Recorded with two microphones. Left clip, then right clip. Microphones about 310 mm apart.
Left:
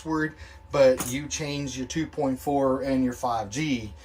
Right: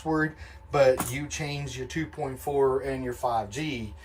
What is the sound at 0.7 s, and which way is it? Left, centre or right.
Speech, centre.